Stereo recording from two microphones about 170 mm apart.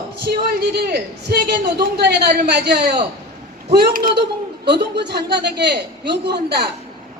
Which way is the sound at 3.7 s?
65° right (ahead or behind).